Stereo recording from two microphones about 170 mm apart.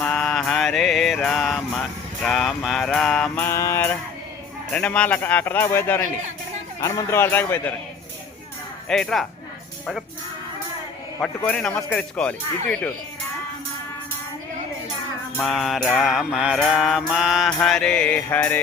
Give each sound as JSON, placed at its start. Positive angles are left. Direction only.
{"t": 0.0, "sound": "mantra", "side_deg": 5}
{"t": 3.5, "sound": "speech", "side_deg": 15}
{"t": 8.9, "sound": "mantra", "side_deg": 5}
{"t": 11.2, "sound": "mantra", "side_deg": 5}
{"t": 11.8, "sound": "speech", "side_deg": 10}
{"t": 15.4, "sound": "mantra", "side_deg": 0}
{"t": 17.6, "sound": "speech", "side_deg": 5}